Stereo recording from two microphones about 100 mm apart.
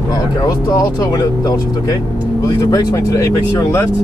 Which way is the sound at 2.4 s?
35° left (ahead or behind).